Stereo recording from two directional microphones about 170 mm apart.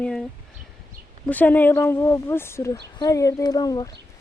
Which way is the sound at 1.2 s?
10° left (ahead or behind).